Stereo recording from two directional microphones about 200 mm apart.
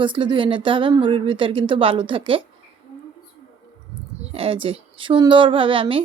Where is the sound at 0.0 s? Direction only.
25° right (ahead or behind).